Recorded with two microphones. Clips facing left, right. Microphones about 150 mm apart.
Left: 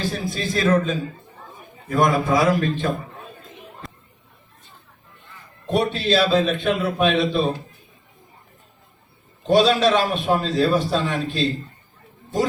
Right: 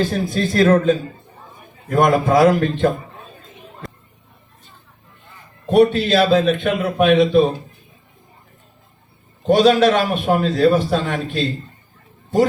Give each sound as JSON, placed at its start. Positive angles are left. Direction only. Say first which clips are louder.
{"t": 0.0, "sound": "a man's voice", "louder": "right 6 dB", "side_deg": -55}
{"t": 2.0, "sound": "a man's voice", "louder": "right 5 dB", "side_deg": -60}
{"t": 5.7, "sound": "a man's voice", "louder": "right 6 dB", "side_deg": -55}
{"t": 9.5, "sound": "a man's voice", "louder": "right 3 dB", "side_deg": -55}